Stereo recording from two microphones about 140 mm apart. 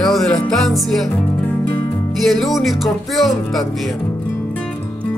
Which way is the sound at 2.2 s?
Centre (ahead or behind).